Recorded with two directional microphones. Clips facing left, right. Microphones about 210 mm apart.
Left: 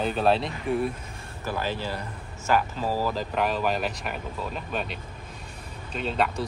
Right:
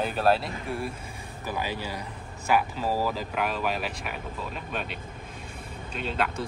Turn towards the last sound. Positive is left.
turn(degrees=0)  # may be behind; listen again after turning